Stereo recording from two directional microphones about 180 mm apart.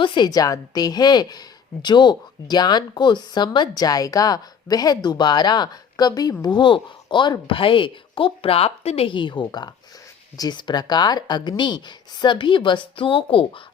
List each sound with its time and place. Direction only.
0.0 s speech: 25° left (ahead or behind)